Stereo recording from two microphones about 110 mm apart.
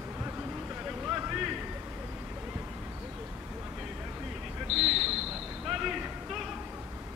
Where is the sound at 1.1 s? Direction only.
15° right (ahead or behind).